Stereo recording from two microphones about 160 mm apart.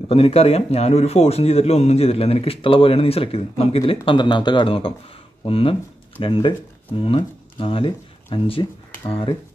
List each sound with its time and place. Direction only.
0.1 s a man's voice: 40° left (ahead or behind)